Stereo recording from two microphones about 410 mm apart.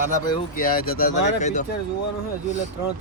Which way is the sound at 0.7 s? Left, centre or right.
Left.